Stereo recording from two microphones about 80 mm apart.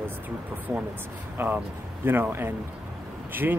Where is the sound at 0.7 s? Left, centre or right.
Right.